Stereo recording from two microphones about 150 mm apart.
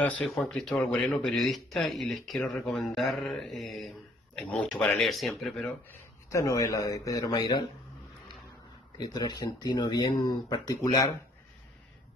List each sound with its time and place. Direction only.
0.0 s speech: 10° left (ahead or behind)
6.3 s speech: 20° left (ahead or behind)
8.9 s speech: 25° left (ahead or behind)